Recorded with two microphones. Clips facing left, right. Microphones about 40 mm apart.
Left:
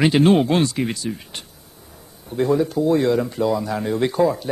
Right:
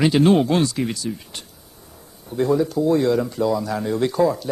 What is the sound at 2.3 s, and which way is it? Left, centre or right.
Speech, centre.